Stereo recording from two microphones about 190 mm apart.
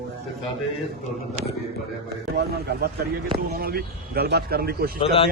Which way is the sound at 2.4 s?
60° right (ahead or behind).